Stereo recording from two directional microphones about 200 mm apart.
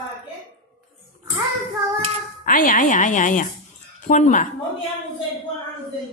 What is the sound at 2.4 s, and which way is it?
Speech, 45° left (ahead or behind).